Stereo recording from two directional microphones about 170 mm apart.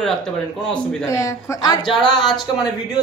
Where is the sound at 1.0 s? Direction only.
20° left (ahead or behind).